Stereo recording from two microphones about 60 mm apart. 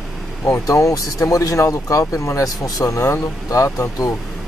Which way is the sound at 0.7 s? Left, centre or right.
Left.